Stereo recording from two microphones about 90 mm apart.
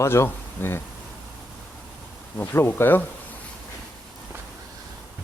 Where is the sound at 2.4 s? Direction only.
25° left (ahead or behind).